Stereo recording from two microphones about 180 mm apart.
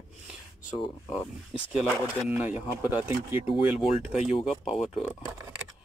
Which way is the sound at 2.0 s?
10° right (ahead or behind).